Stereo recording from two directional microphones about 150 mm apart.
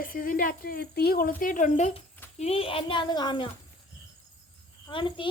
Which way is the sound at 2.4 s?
40° left (ahead or behind).